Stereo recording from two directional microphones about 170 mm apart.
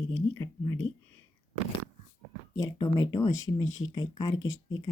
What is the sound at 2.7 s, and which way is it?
Speech, 30° left (ahead or behind).